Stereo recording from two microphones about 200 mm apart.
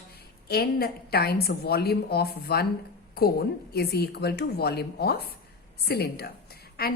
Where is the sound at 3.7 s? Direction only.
55° left (ahead or behind).